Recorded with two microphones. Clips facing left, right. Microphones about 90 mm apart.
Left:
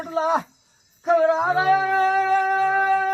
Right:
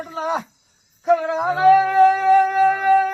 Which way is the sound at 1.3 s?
40° left (ahead or behind).